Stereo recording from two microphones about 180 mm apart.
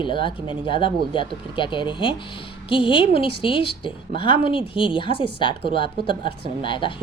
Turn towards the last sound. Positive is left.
turn(degrees=25)  # may be behind; listen again after turning